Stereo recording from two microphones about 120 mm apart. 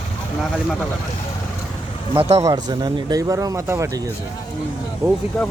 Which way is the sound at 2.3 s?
30° right (ahead or behind).